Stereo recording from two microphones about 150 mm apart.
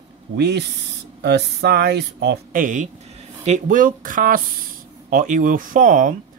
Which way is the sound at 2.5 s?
60° right (ahead or behind).